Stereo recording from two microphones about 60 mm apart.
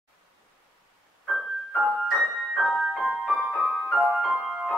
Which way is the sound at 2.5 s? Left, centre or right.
Centre.